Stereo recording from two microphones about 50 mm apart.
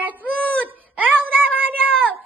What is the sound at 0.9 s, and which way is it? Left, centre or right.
Speech, right.